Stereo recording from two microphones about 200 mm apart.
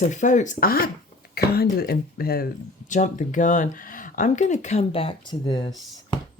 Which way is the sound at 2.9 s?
40° left (ahead or behind).